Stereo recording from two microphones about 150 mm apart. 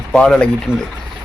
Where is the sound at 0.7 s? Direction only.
15° left (ahead or behind).